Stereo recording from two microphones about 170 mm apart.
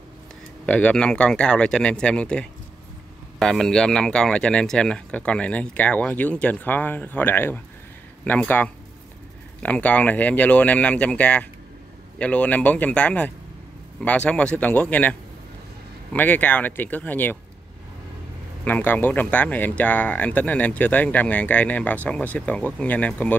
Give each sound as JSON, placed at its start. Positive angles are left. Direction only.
{"t": 0.7, "sound": "speech", "side_deg": 5}
{"t": 18.6, "sound": "speech", "side_deg": 10}